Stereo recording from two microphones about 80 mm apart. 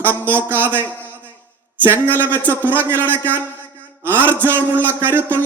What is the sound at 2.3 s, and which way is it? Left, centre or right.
Speech, left.